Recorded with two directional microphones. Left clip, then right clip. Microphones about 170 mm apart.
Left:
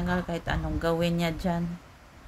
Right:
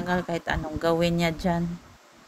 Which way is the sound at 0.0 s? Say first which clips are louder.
Right 3 dB; 15° right (ahead or behind).